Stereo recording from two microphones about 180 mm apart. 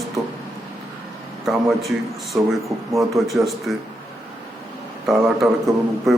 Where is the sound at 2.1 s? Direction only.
Centre (ahead or behind).